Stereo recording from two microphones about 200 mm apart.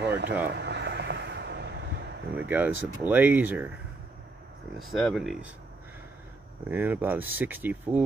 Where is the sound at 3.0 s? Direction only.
10° right (ahead or behind).